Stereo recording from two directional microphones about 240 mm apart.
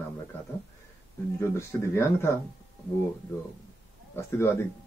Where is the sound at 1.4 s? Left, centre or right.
Centre.